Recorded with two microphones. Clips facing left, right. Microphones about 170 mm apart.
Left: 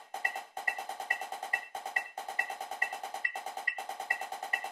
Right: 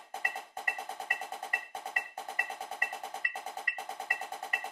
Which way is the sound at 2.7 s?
25° left (ahead or behind).